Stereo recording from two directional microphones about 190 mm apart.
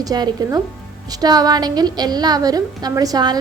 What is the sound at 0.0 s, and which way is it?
A woman's voice, 20° right (ahead or behind).